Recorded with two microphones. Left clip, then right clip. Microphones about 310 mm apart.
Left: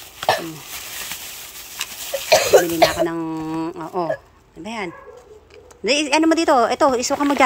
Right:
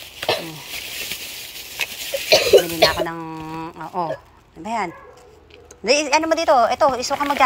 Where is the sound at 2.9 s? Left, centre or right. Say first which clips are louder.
Left 3 dB; centre.